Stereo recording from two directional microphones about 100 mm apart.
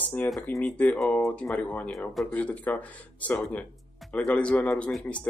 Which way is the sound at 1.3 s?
15° left (ahead or behind).